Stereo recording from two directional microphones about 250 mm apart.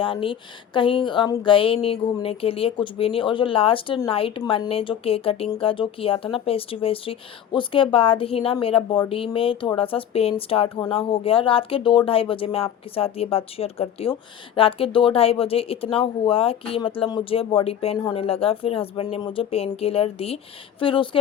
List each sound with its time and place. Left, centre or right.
0.0 s speech: left